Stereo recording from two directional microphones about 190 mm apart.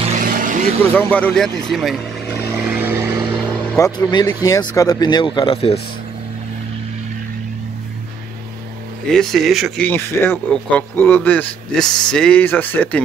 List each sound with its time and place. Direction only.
0.0 s vehicle: 40° right (ahead or behind)
0.9 s speech: 10° left (ahead or behind)
2.7 s vehicle: 10° right (ahead or behind)
3.7 s speech: 20° left (ahead or behind)
9.1 s speech: centre (ahead or behind)
9.8 s speech: 10° left (ahead or behind)